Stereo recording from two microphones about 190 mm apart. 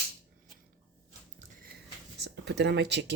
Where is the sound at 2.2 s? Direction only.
65° right (ahead or behind).